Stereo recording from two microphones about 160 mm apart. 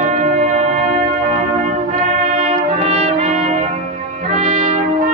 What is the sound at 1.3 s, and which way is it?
Music, 40° right (ahead or behind).